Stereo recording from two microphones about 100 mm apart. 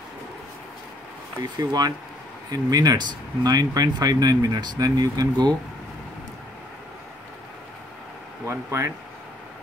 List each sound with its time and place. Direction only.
1.4 s speech: 40° right (ahead or behind)
8.5 s speech: 30° right (ahead or behind)